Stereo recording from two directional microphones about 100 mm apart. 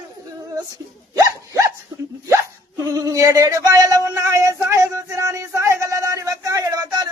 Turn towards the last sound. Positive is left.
turn(degrees=-30)  # may be behind; listen again after turning